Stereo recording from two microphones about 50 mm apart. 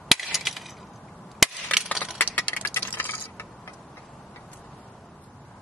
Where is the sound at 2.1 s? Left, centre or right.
Left.